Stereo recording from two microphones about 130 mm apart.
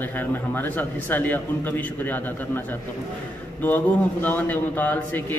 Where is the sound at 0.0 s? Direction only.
15° left (ahead or behind).